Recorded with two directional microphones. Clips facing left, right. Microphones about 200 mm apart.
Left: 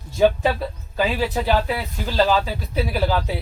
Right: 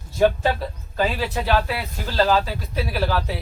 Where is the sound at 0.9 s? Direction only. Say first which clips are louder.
Left 2 dB; 15° left (ahead or behind).